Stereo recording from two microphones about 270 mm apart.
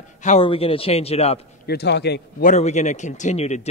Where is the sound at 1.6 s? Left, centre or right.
Left.